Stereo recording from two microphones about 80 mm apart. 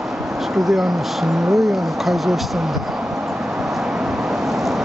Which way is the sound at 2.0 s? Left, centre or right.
Centre.